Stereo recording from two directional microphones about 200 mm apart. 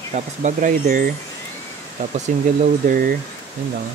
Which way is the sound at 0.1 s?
35° right (ahead or behind).